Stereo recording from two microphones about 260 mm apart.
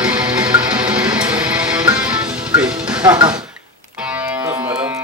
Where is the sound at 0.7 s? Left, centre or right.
Centre.